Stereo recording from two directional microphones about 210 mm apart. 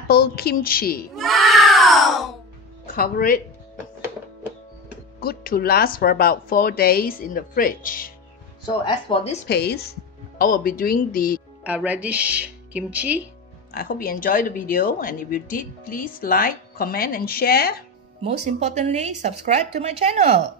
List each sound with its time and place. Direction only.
0.1 s speech: 50° left (ahead or behind)
1.1 s cat: centre (ahead or behind)
2.9 s speech: 40° left (ahead or behind)
5.2 s speech: 45° left (ahead or behind)
8.8 s a woman's voice: 25° left (ahead or behind)
9.5 s speech: 50° left (ahead or behind)
11.6 s speech: 5° right (ahead or behind)
13.7 s speech: 45° left (ahead or behind)
18.2 s speech: 30° right (ahead or behind)